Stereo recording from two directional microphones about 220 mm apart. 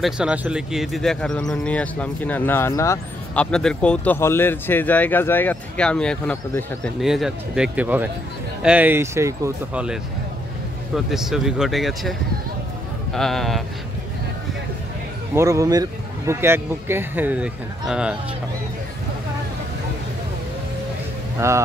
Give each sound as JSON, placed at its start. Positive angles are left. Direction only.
{"t": 0.0, "sound": "speech", "side_deg": -5}
{"t": 11.1, "sound": "speech", "side_deg": 0}
{"t": 15.3, "sound": "speech", "side_deg": -15}
{"t": 21.4, "sound": "speech", "side_deg": -15}